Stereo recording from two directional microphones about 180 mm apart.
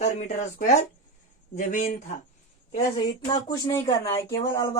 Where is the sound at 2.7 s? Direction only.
25° left (ahead or behind).